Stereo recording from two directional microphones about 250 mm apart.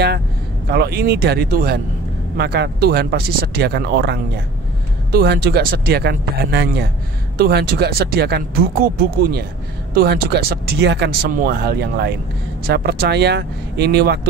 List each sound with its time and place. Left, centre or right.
0.7 s speech: right